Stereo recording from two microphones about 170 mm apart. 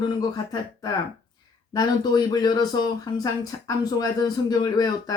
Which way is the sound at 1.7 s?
25° left (ahead or behind).